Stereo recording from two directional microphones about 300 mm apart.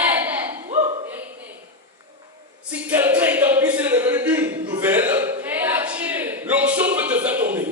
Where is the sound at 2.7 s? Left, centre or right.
Centre.